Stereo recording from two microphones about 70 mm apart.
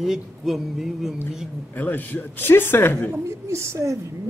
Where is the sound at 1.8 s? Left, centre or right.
Left.